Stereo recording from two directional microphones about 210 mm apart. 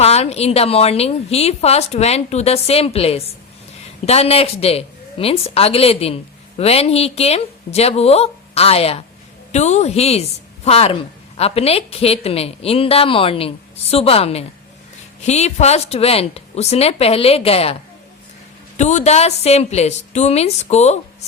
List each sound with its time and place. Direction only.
0.0 s a woman's voice: 30° left (ahead or behind)
18.8 s a woman's voice: 35° left (ahead or behind)